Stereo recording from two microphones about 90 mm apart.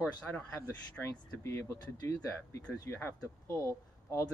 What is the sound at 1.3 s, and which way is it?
Speech, 30° left (ahead or behind).